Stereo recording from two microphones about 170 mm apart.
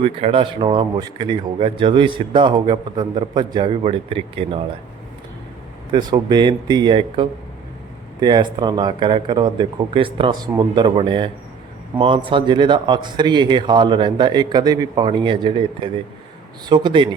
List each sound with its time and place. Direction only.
0.0 s speech: 30° right (ahead or behind)
5.9 s speech: 25° right (ahead or behind)